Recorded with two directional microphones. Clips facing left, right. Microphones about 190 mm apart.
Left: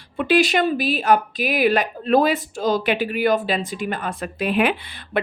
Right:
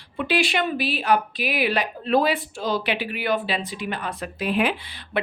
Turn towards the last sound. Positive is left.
turn(degrees=55)  # may be behind; listen again after turning